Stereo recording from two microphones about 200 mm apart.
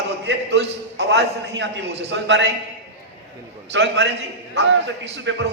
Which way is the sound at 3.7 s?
60° right (ahead or behind).